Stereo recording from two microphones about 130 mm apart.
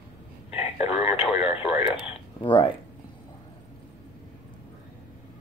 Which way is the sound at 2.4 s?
40° left (ahead or behind).